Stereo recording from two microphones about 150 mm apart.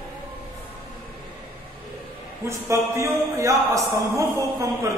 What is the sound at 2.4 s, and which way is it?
A man's voice, 20° right (ahead or behind).